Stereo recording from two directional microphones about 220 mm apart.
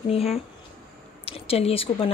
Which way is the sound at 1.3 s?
25° left (ahead or behind).